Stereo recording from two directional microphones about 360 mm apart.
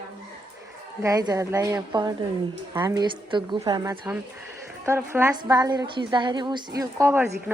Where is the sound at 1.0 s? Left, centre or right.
Centre.